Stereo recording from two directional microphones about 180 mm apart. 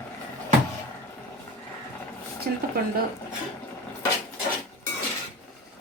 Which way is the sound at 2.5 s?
60° right (ahead or behind).